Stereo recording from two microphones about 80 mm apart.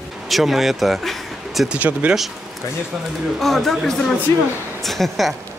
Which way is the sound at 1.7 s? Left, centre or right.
Centre.